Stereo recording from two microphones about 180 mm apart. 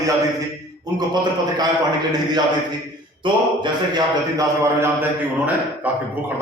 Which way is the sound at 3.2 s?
25° right (ahead or behind).